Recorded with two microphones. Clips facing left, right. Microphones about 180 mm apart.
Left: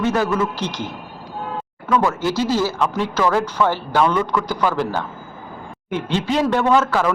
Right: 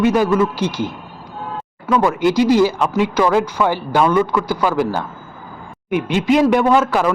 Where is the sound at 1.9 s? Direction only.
15° right (ahead or behind).